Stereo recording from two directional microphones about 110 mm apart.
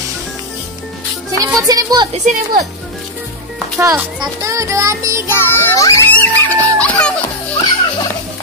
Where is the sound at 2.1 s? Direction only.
90° right.